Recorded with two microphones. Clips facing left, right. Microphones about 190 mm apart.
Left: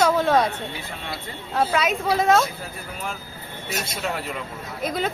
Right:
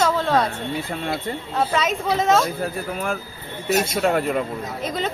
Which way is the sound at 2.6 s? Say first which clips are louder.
Right 8 dB; 55° right (ahead or behind).